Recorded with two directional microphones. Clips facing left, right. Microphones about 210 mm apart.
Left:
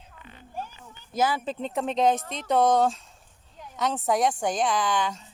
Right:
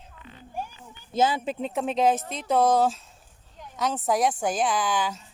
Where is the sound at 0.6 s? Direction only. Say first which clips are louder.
Right 2 dB; 15° right (ahead or behind).